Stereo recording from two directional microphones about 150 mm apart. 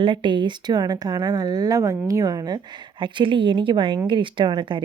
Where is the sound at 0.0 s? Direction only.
35° right (ahead or behind).